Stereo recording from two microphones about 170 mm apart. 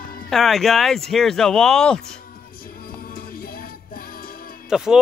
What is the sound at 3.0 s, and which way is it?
Music, 60° left (ahead or behind).